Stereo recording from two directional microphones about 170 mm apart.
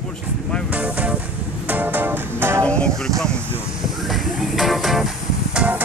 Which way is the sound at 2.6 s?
5° left (ahead or behind).